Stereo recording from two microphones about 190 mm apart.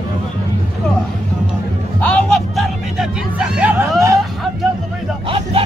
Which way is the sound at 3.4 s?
10° right (ahead or behind).